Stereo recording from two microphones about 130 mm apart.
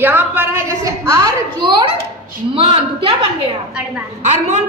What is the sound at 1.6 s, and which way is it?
A woman's voice, 35° right (ahead or behind).